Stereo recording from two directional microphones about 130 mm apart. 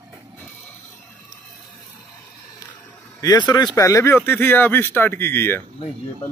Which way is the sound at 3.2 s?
30° left (ahead or behind).